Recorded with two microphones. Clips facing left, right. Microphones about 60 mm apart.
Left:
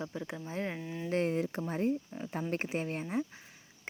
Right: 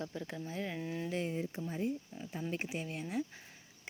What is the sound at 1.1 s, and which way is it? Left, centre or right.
Speech, left.